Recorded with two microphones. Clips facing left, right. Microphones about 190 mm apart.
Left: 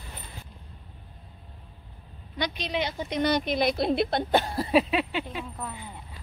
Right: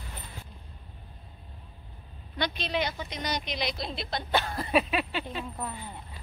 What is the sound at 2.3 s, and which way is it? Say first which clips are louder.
Speech: left 1 dB; 15° left (ahead or behind).